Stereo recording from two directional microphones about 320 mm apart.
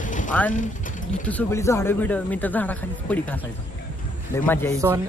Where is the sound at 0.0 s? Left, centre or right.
Left.